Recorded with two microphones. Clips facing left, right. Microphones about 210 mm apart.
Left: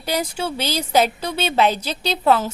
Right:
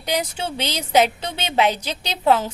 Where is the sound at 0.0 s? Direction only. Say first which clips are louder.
Left 1 dB; 15° right (ahead or behind).